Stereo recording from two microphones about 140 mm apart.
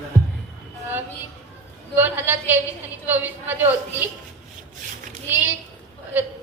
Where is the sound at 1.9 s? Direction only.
15° right (ahead or behind).